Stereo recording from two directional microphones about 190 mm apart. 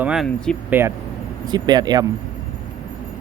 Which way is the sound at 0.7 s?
10° right (ahead or behind).